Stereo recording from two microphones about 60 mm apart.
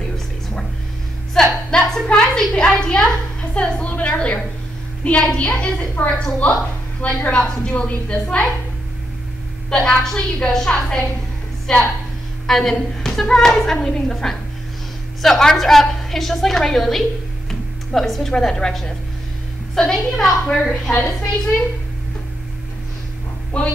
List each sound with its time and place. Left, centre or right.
1.3 s a sound: centre
2.6 s a woman's voice: centre
9.7 s a woman's voice: centre
17.5 s music: centre
18.3 s a woman's voice: centre
23.5 s a woman's voice: centre